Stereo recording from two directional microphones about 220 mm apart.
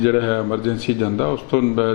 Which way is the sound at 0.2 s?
25° left (ahead or behind).